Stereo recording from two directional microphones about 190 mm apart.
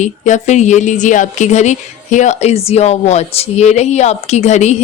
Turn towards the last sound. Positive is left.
turn(degrees=35)  # may be behind; listen again after turning